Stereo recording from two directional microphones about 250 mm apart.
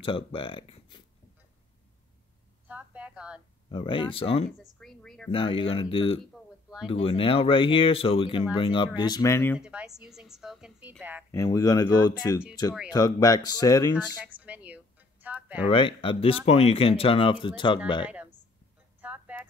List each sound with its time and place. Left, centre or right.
0.0 s speech: left
2.7 s speech: centre
3.6 s speech: centre
4.7 s a woman's voice: centre
5.3 s speech: left
9.6 s a woman's voice: centre
11.3 s speech: centre
14.2 s a sound: centre
15.6 s speech: left
18.0 s speech: centre
18.9 s a sound: centre